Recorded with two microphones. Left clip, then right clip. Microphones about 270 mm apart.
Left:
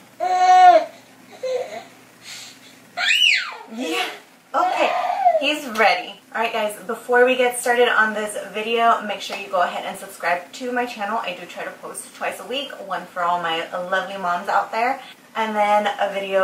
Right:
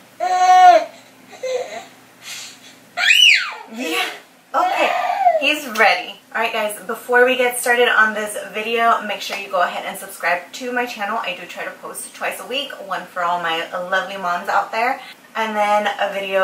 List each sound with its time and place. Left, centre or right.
0.2 s a sound: centre
2.9 s a child's voice: centre
12.3 s a woman's voice: centre